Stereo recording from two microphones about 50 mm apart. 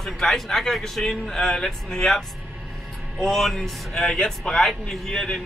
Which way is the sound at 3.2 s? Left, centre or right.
Centre.